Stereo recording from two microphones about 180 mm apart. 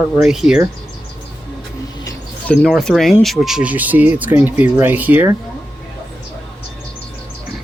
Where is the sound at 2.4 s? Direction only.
Centre (ahead or behind).